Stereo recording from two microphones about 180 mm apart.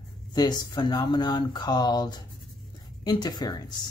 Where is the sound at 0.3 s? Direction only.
25° left (ahead or behind).